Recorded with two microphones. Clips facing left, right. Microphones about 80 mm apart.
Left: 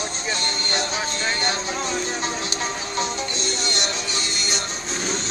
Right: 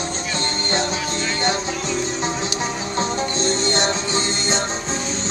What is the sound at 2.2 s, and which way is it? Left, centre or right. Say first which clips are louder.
Music: right 3 dB; right.